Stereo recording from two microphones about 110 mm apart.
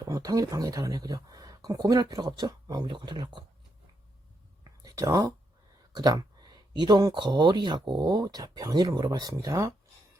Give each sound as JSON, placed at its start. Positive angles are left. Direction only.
{"t": 0.0, "sound": "speech", "side_deg": -35}
{"t": 4.8, "sound": "speech", "side_deg": -35}